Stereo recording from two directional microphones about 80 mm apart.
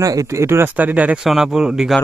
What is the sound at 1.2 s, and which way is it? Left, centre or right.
Speech, centre.